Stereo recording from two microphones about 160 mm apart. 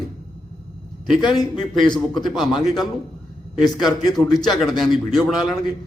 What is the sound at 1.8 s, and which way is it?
A man's voice, 5° left (ahead or behind).